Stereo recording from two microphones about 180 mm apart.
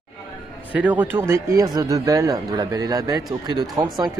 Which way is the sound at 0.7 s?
10° right (ahead or behind).